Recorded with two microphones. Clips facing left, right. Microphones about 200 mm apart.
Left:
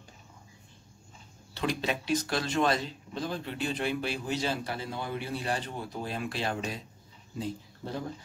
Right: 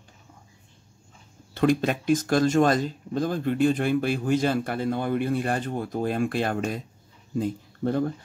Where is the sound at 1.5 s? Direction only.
50° right (ahead or behind).